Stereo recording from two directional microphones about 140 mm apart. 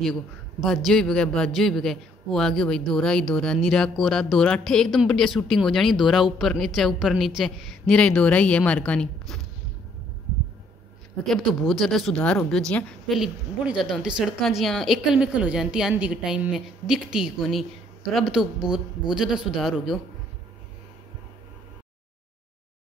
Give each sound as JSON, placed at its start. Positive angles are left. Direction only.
{"t": 0.0, "sound": "a man's voice", "side_deg": 5}
{"t": 11.2, "sound": "a man's voice", "side_deg": 0}